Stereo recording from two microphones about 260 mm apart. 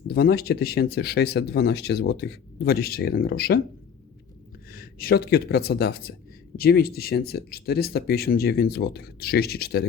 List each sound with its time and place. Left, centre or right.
0.1 s speech: left
4.7 s speech: left